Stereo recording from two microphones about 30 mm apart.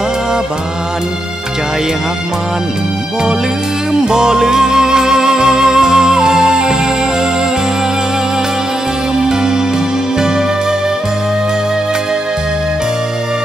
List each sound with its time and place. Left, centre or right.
4.0 s music: right
9.2 s music: right